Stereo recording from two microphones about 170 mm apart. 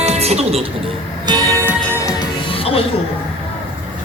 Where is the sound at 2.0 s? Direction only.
20° left (ahead or behind).